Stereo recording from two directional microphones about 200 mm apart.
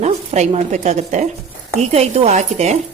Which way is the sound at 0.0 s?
35° right (ahead or behind).